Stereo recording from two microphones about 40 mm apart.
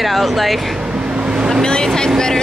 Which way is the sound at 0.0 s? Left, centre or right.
Centre.